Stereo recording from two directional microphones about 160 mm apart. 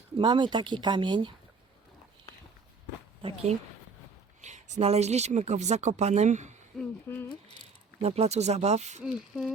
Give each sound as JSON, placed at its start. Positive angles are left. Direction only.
{"t": 0.2, "sound": "speech", "side_deg": -30}
{"t": 3.2, "sound": "speech", "side_deg": -40}
{"t": 6.7, "sound": "speech", "side_deg": 10}
{"t": 8.0, "sound": "speech", "side_deg": -40}